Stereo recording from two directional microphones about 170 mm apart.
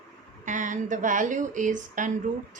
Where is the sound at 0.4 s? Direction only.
50° right (ahead or behind).